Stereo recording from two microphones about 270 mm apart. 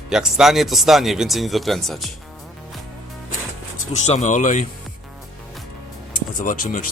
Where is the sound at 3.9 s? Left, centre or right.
Left.